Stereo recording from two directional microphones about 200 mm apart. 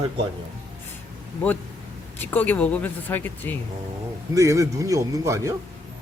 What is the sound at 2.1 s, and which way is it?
Speech, 10° left (ahead or behind).